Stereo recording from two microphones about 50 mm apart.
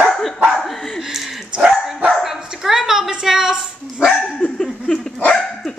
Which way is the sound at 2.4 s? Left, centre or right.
Centre.